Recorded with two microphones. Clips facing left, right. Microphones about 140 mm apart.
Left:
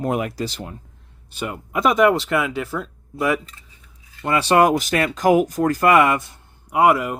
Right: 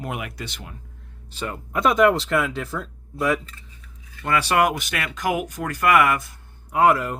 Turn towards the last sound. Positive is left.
turn(degrees=10)  # may be behind; listen again after turning